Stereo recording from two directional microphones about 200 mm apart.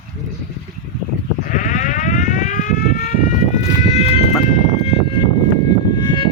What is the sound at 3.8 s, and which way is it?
Sheep, 30° left (ahead or behind).